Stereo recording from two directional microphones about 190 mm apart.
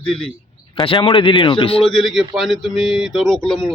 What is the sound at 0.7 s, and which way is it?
Speech, 25° left (ahead or behind).